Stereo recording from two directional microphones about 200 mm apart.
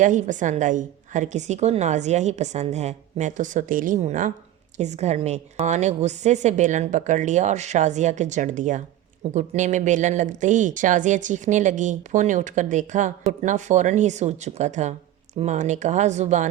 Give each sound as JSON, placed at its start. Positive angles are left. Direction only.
{"t": 0.0, "sound": "a woman's voice", "side_deg": -40}